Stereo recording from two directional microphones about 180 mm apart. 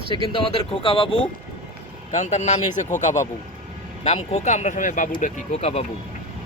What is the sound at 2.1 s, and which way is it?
Speech, 40° left (ahead or behind).